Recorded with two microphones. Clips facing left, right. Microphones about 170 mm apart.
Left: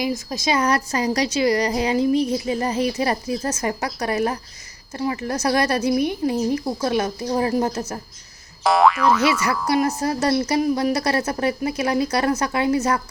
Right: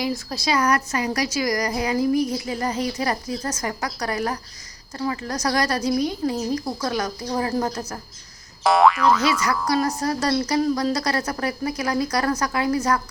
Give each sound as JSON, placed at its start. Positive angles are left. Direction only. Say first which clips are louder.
{"t": 0.0, "sound": "a woman's voice", "louder": "left 2 dB", "side_deg": 20}
{"t": 8.6, "sound": "speech", "louder": "even", "side_deg": 0}
{"t": 9.6, "sound": "a woman's voice", "louder": "left 3 dB", "side_deg": 25}